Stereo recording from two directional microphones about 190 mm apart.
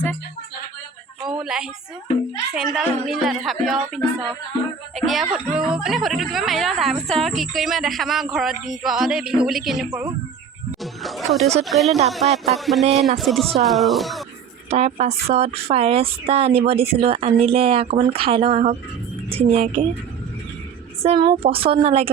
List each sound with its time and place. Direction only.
1.3 s a woman's voice: 5° right (ahead or behind)
12.2 s speech: 35° right (ahead or behind)
12.5 s speech: centre (ahead or behind)
12.8 s speech: 35° right (ahead or behind)
13.1 s speech: centre (ahead or behind)
14.7 s speech: 30° right (ahead or behind)
21.0 s a woman's voice: 25° right (ahead or behind)